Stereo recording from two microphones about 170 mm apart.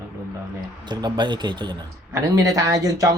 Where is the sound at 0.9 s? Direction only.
25° right (ahead or behind).